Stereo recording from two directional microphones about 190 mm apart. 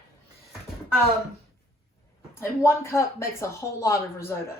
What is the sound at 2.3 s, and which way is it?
Speech, 15° left (ahead or behind).